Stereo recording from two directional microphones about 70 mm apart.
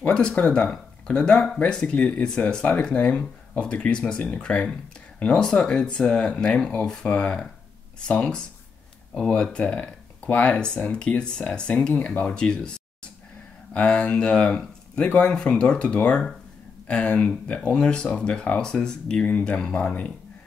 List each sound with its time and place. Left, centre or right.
0.0 s speech: centre